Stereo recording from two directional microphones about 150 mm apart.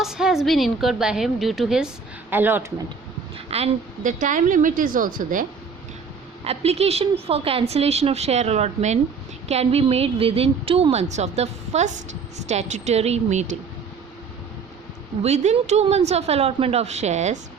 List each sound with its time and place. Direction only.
0.0 s a woman's voice: 5° right (ahead or behind)
2.3 s speech: 15° right (ahead or behind)
3.3 s a sound: 40° right (ahead or behind)
4.0 s a woman's voice: 60° right (ahead or behind)
6.4 s a woman's voice: 45° right (ahead or behind)
15.2 s a woman's voice: 50° right (ahead or behind)